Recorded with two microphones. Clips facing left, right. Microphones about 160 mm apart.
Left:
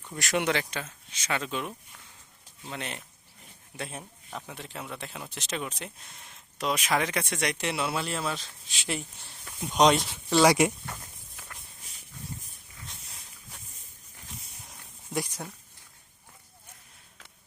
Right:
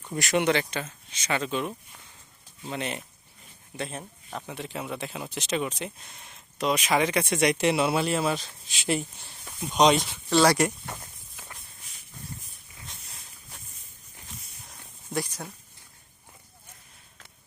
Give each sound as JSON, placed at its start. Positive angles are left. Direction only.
{"t": 0.2, "sound": "speech", "side_deg": 0}
{"t": 7.6, "sound": "speech", "side_deg": -15}
{"t": 9.6, "sound": "speech", "side_deg": 5}
{"t": 14.7, "sound": "a sound", "side_deg": 15}